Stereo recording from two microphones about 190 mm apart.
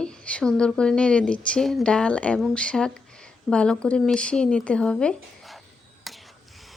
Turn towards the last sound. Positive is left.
turn(degrees=0)  # may be behind; listen again after turning